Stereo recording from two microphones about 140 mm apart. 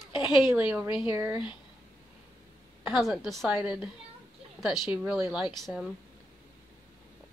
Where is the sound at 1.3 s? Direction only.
35° left (ahead or behind).